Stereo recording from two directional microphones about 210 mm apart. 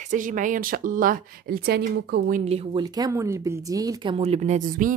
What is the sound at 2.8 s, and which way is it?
Speech, 15° right (ahead or behind).